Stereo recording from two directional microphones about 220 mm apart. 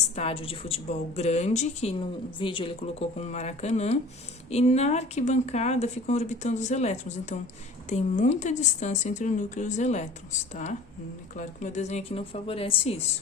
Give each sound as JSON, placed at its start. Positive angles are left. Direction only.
{"t": 0.2, "sound": "a woman's voice", "side_deg": 25}